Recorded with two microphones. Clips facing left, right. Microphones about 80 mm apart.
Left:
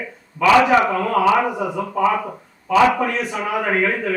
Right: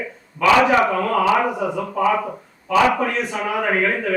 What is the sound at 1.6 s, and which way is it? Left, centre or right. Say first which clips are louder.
Speech: right 1 dB; centre.